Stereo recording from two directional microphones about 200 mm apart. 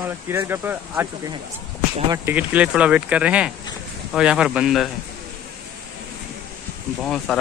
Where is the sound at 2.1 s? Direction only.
10° right (ahead or behind).